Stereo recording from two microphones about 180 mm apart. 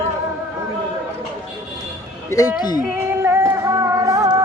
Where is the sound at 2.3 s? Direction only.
20° left (ahead or behind).